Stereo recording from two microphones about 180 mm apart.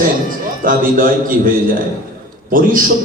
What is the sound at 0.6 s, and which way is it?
A man's voice, 50° right (ahead or behind).